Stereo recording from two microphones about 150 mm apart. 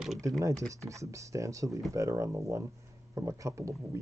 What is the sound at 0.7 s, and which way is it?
Speech, 20° right (ahead or behind).